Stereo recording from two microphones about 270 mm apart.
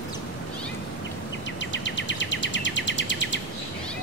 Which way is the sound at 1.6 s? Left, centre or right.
Left.